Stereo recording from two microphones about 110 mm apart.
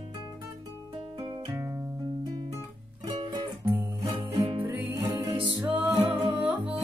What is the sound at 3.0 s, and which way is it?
Music, 45° right (ahead or behind).